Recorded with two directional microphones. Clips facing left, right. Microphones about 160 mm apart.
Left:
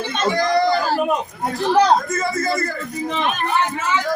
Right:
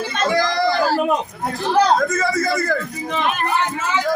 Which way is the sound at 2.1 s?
90° right.